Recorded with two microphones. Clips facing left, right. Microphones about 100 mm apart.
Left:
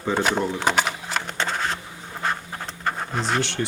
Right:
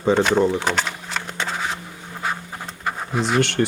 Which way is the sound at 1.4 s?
5° right (ahead or behind).